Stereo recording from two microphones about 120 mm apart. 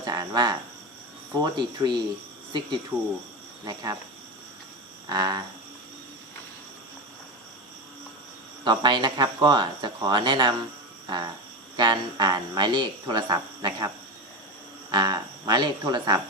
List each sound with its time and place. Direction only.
0.0 s speech: 35° right (ahead or behind)
5.0 s speech: 35° right (ahead or behind)
8.6 s speech: 40° right (ahead or behind)
11.0 s cricket: 35° right (ahead or behind)
11.8 s speech: 35° right (ahead or behind)